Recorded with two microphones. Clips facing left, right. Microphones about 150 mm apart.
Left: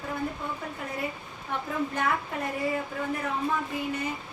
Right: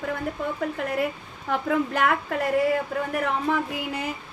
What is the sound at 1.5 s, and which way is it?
Speech, 90° right.